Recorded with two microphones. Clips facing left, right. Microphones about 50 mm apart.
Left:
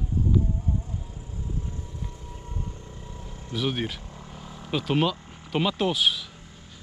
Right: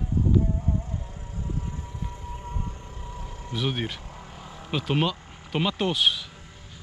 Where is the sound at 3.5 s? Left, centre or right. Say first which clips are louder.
Left 1 dB; centre.